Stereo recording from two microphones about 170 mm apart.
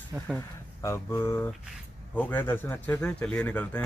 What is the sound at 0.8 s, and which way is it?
A man's voice, 15° left (ahead or behind).